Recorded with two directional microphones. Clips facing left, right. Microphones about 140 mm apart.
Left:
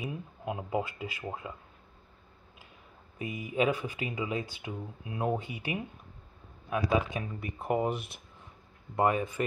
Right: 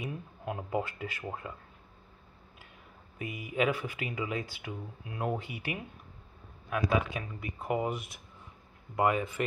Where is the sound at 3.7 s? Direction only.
20° left (ahead or behind).